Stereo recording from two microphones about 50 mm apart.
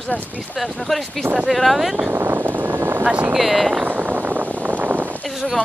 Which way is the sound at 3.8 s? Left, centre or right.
Right.